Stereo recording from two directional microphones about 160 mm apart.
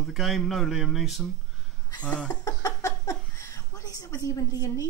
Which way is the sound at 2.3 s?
20° left (ahead or behind).